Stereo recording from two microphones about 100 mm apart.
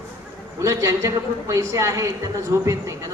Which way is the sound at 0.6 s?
30° right (ahead or behind).